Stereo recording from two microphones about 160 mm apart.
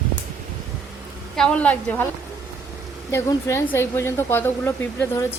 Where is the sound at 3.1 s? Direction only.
15° left (ahead or behind).